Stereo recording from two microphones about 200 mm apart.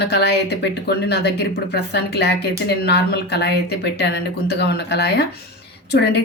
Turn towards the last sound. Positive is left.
turn(degrees=60)  # may be behind; listen again after turning